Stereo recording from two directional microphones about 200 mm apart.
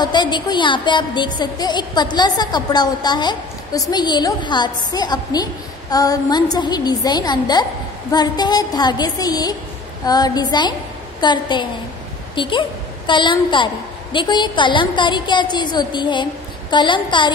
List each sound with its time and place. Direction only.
0.0 s a woman's voice: 20° left (ahead or behind)